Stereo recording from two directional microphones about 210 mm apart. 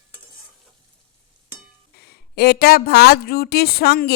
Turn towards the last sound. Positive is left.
turn(degrees=45)  # may be behind; listen again after turning